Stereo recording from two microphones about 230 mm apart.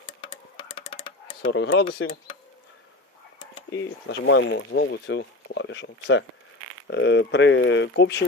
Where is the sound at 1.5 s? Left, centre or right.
Left.